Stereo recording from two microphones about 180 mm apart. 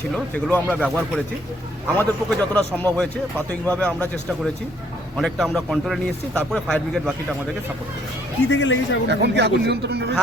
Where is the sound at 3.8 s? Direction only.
5° left (ahead or behind).